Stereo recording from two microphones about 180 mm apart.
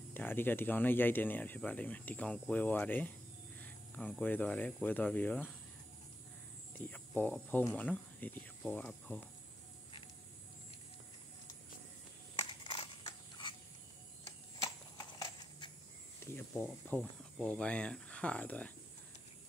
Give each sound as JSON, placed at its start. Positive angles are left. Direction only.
{"t": 0.1, "sound": "speech", "side_deg": 10}
{"t": 6.8, "sound": "speech", "side_deg": 10}
{"t": 12.4, "sound": "a sound", "side_deg": 25}
{"t": 14.6, "sound": "horse", "side_deg": 20}
{"t": 16.5, "sound": "speech", "side_deg": 5}